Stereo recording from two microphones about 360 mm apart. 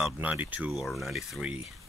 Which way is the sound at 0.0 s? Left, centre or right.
Centre.